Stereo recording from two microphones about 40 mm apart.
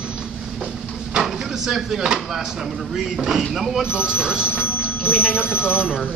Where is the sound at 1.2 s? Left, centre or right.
Centre.